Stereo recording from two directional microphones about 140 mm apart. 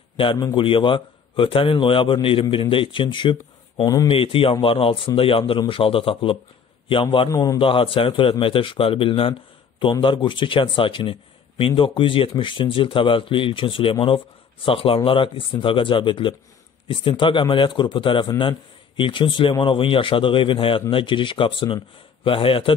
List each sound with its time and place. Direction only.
0.2 s a man's voice: 35° left (ahead or behind)
4.1 s a man's voice: 40° left (ahead or behind)
7.2 s a man's voice: 25° left (ahead or behind)
7.5 s a man's voice: 40° left (ahead or behind)